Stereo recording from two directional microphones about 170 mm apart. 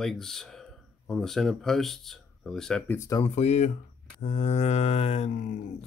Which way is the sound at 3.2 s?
40° left (ahead or behind).